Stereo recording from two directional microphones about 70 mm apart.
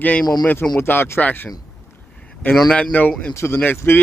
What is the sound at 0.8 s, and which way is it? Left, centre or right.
Speech, left.